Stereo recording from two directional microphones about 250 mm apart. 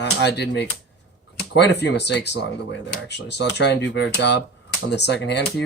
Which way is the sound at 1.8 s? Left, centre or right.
Left.